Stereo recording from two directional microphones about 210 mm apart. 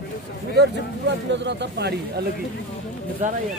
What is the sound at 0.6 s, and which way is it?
Speech, 55° right (ahead or behind).